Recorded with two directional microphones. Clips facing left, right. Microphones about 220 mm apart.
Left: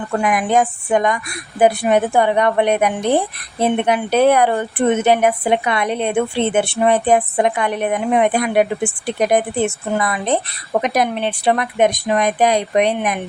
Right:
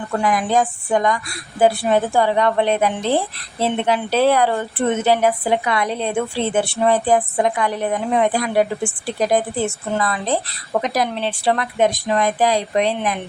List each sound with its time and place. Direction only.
0.2 s a woman's voice: 20° left (ahead or behind)